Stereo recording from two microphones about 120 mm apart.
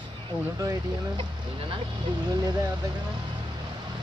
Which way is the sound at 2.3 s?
30° right (ahead or behind).